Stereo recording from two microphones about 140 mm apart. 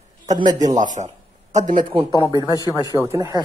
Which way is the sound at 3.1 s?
20° right (ahead or behind).